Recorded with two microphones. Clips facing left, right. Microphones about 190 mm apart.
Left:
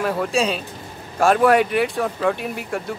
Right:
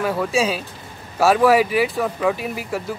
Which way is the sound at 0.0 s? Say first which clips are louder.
Right 1 dB; centre (ahead or behind).